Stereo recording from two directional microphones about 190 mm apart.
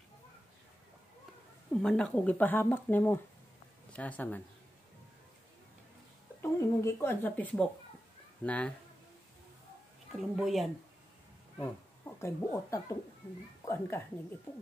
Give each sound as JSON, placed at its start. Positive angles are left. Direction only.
{"t": 1.7, "sound": "speech", "side_deg": 5}
{"t": 6.4, "sound": "speech", "side_deg": 15}
{"t": 10.1, "sound": "speech", "side_deg": 0}
{"t": 12.2, "sound": "speech", "side_deg": 15}